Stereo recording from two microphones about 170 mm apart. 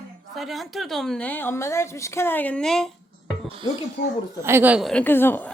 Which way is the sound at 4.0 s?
60° left (ahead or behind).